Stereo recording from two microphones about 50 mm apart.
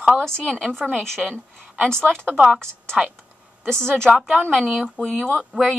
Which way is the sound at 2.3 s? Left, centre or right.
Centre.